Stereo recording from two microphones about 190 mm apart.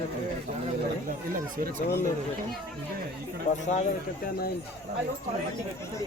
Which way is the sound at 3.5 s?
35° left (ahead or behind).